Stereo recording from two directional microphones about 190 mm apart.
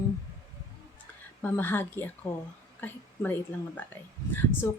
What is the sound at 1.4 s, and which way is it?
Speech, 10° left (ahead or behind).